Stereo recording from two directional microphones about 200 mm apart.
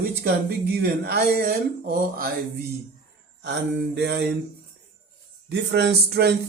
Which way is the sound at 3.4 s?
60° right (ahead or behind).